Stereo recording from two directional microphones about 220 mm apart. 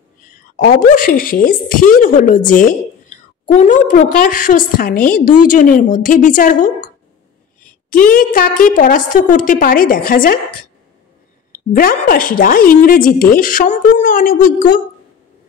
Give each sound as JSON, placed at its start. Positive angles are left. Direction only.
{"t": 0.3, "sound": "a woman's voice", "side_deg": 40}
{"t": 11.5, "sound": "a woman's voice", "side_deg": 40}